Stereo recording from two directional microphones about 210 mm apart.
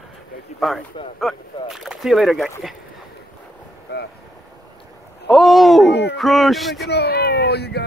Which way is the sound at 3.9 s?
50° left (ahead or behind).